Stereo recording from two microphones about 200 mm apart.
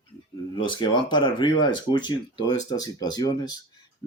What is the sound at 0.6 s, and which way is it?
A man's voice, 20° left (ahead or behind).